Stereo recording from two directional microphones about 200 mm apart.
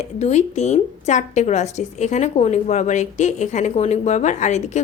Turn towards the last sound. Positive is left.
turn(degrees=35)  # may be behind; listen again after turning